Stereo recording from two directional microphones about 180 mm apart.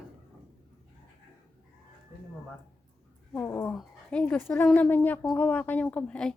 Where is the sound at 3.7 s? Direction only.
5° left (ahead or behind).